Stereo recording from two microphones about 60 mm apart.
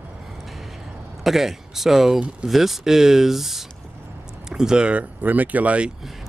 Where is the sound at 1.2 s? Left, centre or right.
Centre; by 5.9 s right.